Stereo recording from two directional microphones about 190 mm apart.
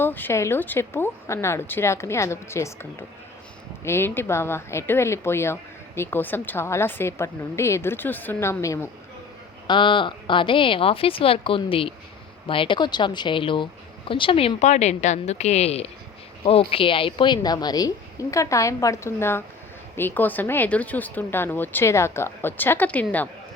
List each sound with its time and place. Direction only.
0.0 s speech: 10° left (ahead or behind)
3.8 s speech: 10° left (ahead or behind)
9.6 s a woman's voice: 25° left (ahead or behind); by 23.3 s 10° left (ahead or behind)